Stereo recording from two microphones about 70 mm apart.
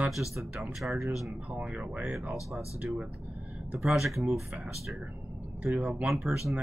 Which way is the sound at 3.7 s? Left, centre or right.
Centre.